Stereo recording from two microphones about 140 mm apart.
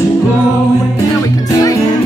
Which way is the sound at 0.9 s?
25° left (ahead or behind).